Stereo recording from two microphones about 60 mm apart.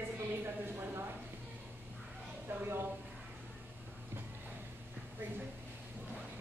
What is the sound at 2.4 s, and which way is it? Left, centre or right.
Speech, right.